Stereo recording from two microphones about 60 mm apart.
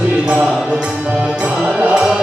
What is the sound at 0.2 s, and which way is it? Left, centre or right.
Music, centre.